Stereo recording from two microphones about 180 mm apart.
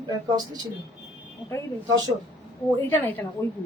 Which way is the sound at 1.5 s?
15° left (ahead or behind).